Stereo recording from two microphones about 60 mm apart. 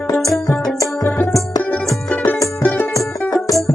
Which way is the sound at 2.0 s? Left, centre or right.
Left.